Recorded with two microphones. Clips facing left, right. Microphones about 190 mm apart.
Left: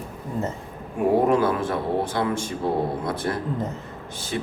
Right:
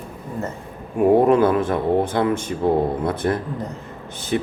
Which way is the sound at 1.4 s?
55° right (ahead or behind).